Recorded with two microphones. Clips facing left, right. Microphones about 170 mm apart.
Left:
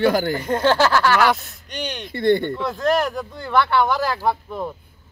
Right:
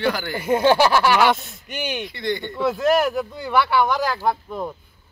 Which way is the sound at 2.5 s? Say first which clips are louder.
Right 2 dB; 5° right (ahead or behind).